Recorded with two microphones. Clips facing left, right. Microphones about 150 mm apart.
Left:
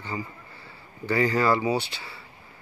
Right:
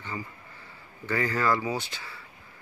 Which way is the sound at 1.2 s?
30° left (ahead or behind).